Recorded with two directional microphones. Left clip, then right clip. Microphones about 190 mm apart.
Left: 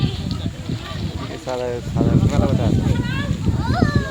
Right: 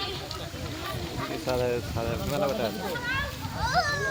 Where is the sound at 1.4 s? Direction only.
30° left (ahead or behind).